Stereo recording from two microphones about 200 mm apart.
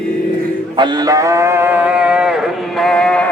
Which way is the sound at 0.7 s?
20° right (ahead or behind).